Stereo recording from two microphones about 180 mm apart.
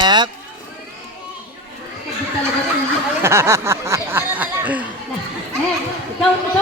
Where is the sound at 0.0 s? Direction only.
25° right (ahead or behind).